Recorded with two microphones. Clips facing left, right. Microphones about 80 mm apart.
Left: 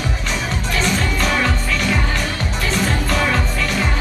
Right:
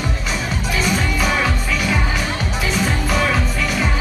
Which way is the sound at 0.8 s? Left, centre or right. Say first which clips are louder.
Even; centre.